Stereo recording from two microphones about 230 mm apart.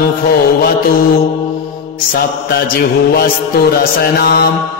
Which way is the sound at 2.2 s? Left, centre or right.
Left.